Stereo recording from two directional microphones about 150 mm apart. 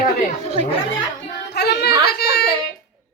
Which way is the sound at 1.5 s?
90° left.